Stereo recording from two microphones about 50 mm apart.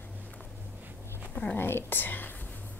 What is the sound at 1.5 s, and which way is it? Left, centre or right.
Speech, left.